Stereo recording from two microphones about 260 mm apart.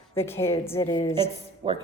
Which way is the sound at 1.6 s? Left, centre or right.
Centre.